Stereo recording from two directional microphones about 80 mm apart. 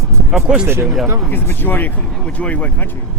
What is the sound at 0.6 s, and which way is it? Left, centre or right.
Speech, right.